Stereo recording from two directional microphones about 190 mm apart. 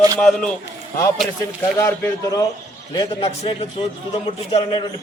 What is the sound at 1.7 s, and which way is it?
Speech, 15° left (ahead or behind).